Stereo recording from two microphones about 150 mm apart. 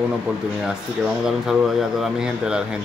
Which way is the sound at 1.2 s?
Centre (ahead or behind).